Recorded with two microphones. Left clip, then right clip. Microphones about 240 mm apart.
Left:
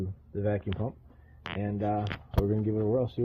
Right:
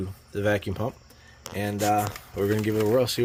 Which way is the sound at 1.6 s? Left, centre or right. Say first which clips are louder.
Right 8 dB; centre.